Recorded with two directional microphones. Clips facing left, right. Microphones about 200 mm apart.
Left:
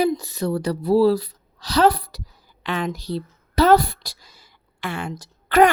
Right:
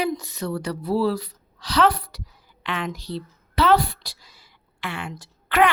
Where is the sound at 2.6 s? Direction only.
40° left (ahead or behind).